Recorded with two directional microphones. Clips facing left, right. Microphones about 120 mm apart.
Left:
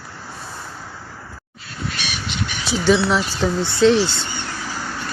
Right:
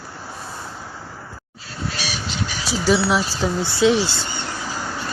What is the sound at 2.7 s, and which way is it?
Speech, 5° right (ahead or behind).